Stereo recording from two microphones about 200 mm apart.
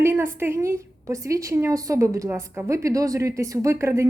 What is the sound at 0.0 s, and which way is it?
A woman's voice, 10° right (ahead or behind).